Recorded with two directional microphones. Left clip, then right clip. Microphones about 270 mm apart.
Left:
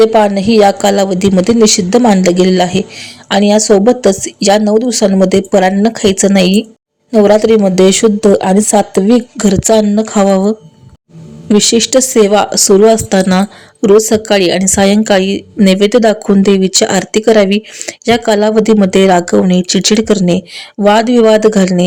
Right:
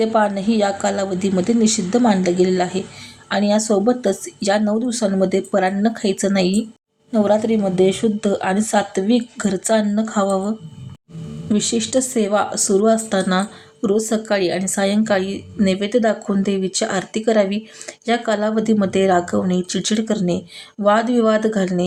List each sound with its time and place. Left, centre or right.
0.0 s a woman's voice: left